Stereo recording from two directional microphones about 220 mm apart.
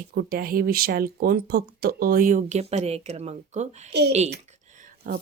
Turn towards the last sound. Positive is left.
turn(degrees=-40)  # may be behind; listen again after turning